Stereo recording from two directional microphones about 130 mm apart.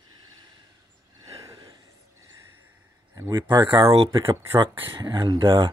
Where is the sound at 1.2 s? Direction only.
25° right (ahead or behind).